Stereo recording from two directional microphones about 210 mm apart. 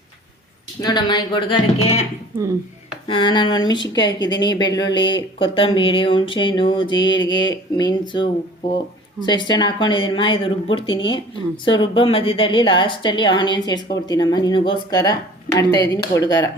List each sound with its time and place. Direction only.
0.8 s speech: 20° left (ahead or behind)
3.1 s speech: 25° left (ahead or behind)